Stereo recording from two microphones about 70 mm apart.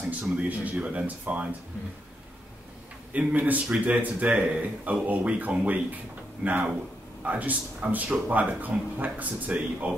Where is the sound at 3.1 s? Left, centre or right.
Right.